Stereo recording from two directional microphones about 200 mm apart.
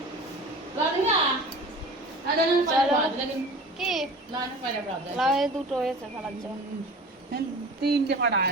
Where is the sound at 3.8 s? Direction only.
Centre (ahead or behind).